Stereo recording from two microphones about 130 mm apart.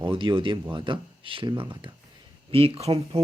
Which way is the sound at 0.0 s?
40° right (ahead or behind).